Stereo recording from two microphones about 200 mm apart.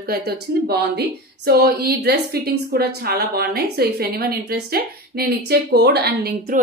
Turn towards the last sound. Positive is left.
turn(degrees=-50)  # may be behind; listen again after turning